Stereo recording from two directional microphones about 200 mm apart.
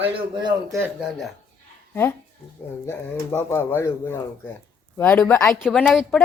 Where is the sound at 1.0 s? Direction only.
Centre (ahead or behind).